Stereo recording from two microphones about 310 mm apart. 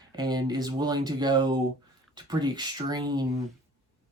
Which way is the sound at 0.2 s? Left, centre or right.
Centre.